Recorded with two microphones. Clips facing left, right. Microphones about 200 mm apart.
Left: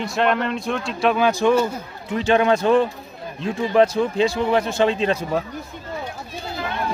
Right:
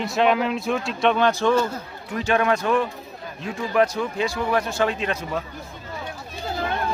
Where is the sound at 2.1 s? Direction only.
25° left (ahead or behind).